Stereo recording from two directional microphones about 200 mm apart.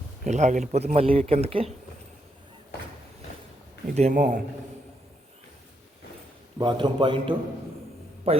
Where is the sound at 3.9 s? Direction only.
40° right (ahead or behind).